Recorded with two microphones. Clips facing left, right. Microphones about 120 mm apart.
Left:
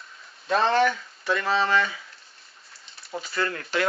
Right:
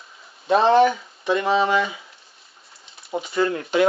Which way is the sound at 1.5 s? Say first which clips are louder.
Right 3 dB; 10° right (ahead or behind).